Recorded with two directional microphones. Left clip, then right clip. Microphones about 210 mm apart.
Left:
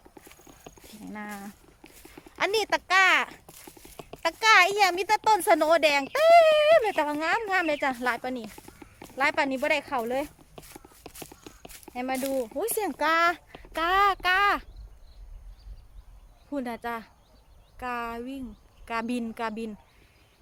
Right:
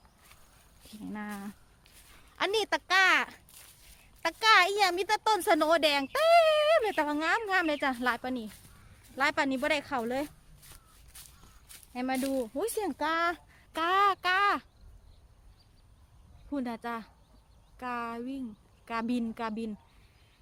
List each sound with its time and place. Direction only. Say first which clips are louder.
1.1 s speech: left 3 dB; 15° right (ahead or behind)
11.9 s speech: left 3 dB; 20° right (ahead or behind)
16.5 s a woman's voice: left 3 dB; 5° right (ahead or behind)